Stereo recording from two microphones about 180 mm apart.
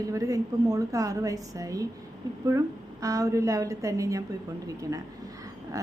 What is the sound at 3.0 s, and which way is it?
A woman's voice, 20° right (ahead or behind).